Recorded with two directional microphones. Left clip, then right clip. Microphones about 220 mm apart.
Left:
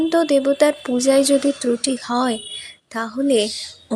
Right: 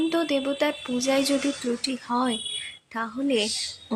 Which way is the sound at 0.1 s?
20° left (ahead or behind).